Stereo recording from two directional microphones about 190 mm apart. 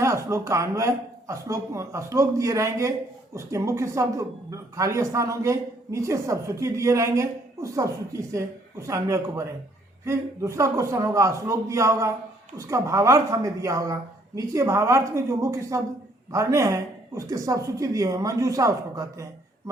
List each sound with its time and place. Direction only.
0.0 s speech: 15° right (ahead or behind)